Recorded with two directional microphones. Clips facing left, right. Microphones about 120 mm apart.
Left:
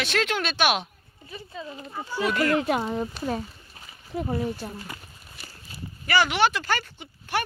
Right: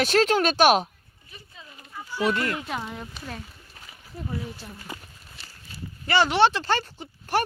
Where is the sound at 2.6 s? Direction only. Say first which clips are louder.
Left 8 dB; 55° left (ahead or behind).